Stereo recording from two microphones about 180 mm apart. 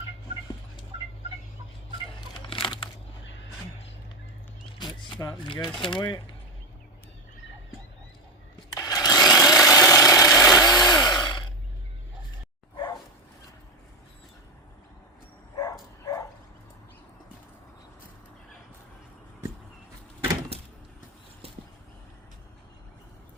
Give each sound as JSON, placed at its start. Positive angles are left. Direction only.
{"t": 2.5, "sound": "a sound", "side_deg": 30}
{"t": 4.6, "sound": "single-lens reflex camera", "side_deg": 25}
{"t": 5.8, "sound": "speech", "side_deg": 25}
{"t": 8.7, "sound": "a sound", "side_deg": 20}
{"t": 9.3, "sound": "tools", "side_deg": 15}
{"t": 9.6, "sound": "chainsaw", "side_deg": 15}
{"t": 12.7, "sound": "bow-wow", "side_deg": 25}
{"t": 15.5, "sound": "bow-wow", "side_deg": 20}